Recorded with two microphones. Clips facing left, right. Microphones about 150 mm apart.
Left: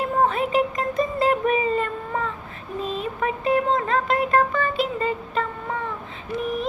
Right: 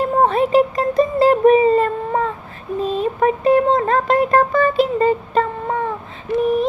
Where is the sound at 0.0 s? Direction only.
35° right (ahead or behind).